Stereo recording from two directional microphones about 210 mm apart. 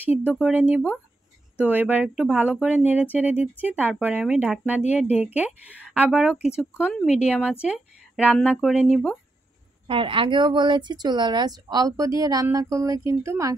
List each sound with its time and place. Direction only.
0.2 s speech: 5° right (ahead or behind)
9.8 s speech: 25° right (ahead or behind)